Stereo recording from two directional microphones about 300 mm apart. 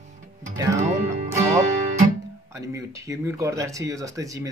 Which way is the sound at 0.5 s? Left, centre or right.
Centre.